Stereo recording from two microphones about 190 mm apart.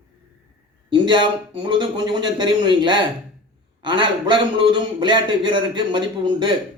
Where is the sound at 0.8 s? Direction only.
25° right (ahead or behind).